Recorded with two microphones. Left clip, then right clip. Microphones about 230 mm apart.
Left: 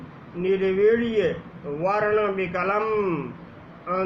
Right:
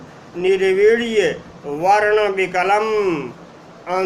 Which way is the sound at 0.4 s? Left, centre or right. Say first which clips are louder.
Right 6 dB; centre.